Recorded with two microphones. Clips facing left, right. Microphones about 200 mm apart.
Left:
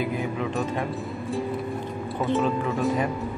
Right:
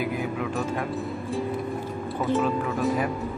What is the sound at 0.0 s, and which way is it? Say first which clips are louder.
Music: left 1 dB; 5° right (ahead or behind).